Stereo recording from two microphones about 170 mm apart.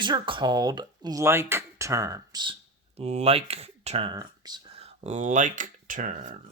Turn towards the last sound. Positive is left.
turn(degrees=-50)  # may be behind; listen again after turning